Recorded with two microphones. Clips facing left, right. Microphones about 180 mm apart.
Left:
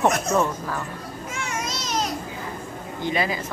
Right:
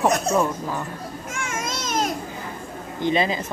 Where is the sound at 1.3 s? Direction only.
50° right (ahead or behind).